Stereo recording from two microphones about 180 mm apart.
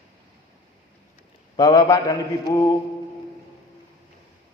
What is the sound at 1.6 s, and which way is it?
A man's voice, 20° left (ahead or behind).